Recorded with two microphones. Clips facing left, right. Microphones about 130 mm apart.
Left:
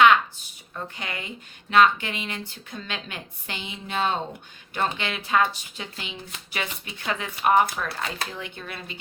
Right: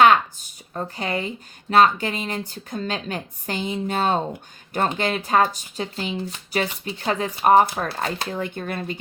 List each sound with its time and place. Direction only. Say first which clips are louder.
0.0 s a sound: right 2 dB; 40° right (ahead or behind)
1.7 s speech: right 2 dB; 40° right (ahead or behind)
8.3 s speech: right 9 dB; 45° right (ahead or behind)